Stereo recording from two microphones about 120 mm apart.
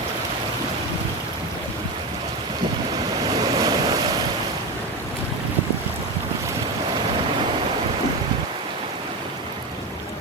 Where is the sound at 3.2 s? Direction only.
30° right (ahead or behind).